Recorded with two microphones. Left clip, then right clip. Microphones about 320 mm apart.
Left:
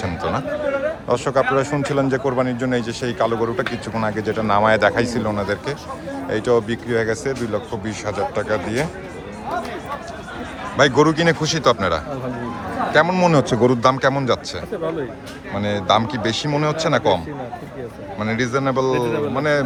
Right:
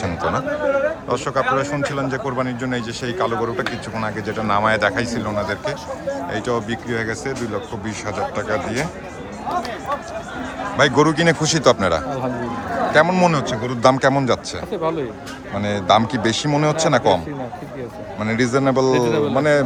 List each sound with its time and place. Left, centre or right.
0.0 s speech: centre
10.8 s a man's voice: centre
13.3 s speech: centre
13.8 s a man's voice: centre
15.5 s a man's voice: centre
18.2 s a man's voice: centre
18.9 s speech: right
19.3 s a man's voice: centre